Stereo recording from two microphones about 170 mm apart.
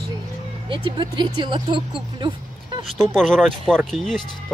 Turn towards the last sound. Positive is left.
turn(degrees=0)  # may be behind; listen again after turning